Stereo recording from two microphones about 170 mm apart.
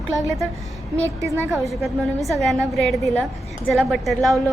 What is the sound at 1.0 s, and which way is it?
Speech, 15° right (ahead or behind).